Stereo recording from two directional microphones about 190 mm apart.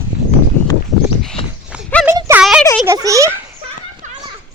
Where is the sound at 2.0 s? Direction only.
15° right (ahead or behind).